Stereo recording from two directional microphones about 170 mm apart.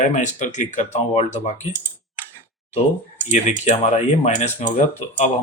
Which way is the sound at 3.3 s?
40° left (ahead or behind).